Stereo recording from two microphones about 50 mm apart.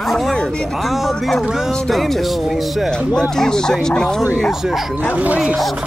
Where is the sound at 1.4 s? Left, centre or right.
Centre.